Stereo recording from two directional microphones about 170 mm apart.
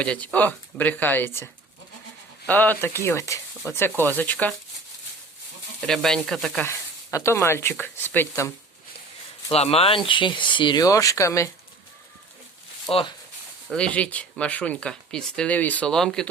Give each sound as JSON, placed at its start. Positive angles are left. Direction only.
{"t": 0.0, "sound": "speech", "side_deg": 5}
{"t": 2.5, "sound": "speech", "side_deg": 10}
{"t": 5.8, "sound": "sizzle", "side_deg": 5}
{"t": 6.7, "sound": "speech", "side_deg": 15}
{"t": 9.5, "sound": "speech", "side_deg": 35}
{"t": 12.9, "sound": "speech", "side_deg": 30}
{"t": 13.7, "sound": "speech", "side_deg": 5}